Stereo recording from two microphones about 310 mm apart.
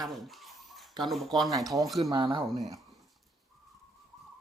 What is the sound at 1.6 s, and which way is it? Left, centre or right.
Speech, centre.